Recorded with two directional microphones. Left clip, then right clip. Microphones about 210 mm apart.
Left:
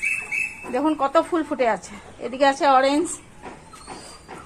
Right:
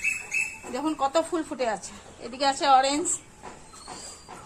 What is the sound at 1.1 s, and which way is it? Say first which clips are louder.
Speech: left 6 dB; 35° left (ahead or behind).